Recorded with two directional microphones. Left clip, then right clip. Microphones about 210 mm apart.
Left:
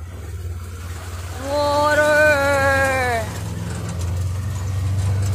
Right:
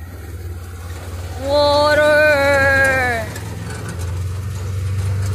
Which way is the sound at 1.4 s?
10° right (ahead or behind).